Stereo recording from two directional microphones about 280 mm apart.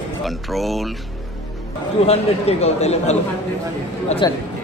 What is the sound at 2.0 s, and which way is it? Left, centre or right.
Speech, left.